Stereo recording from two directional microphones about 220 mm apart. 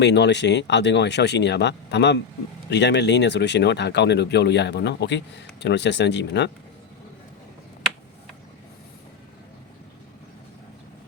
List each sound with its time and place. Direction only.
0.0 s speech: 50° left (ahead or behind)